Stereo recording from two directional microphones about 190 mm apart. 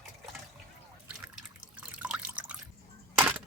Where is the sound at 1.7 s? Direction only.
5° right (ahead or behind).